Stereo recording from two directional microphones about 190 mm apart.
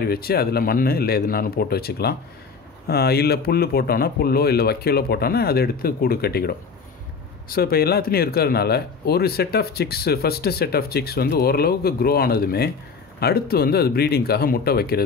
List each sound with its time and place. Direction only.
0.0 s speech: 55° left (ahead or behind)